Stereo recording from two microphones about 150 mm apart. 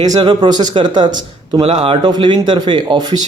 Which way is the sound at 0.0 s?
25° right (ahead or behind).